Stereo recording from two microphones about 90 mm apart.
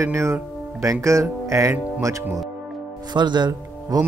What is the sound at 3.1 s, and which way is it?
Speech, 55° right (ahead or behind).